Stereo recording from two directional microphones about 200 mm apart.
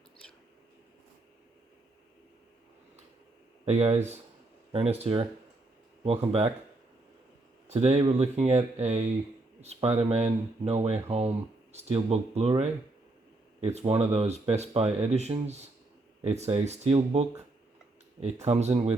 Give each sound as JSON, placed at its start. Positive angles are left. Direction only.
{"t": 3.7, "sound": "speech", "side_deg": -30}
{"t": 7.7, "sound": "speech", "side_deg": -30}
{"t": 18.4, "sound": "speech", "side_deg": -30}